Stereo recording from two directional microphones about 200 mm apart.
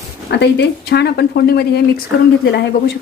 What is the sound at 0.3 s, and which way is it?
A woman's voice, 55° left (ahead or behind).